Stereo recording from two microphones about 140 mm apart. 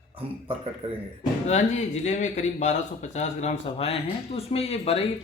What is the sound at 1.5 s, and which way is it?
Speech, 55° left (ahead or behind).